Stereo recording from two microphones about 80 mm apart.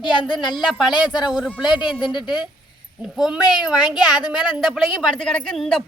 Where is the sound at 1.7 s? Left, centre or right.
Left.